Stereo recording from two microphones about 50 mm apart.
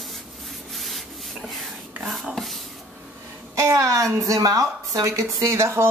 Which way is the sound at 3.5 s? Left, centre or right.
Right.